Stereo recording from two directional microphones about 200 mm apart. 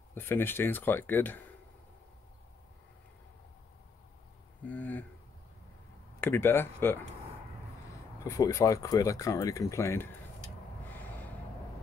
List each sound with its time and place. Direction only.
0.1 s speech: 10° left (ahead or behind)
4.6 s a sound: 10° left (ahead or behind)
6.2 s speech: 10° left (ahead or behind)
8.2 s speech: 15° left (ahead or behind)